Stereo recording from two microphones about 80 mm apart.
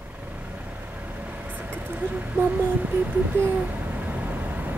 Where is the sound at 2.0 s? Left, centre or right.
Centre.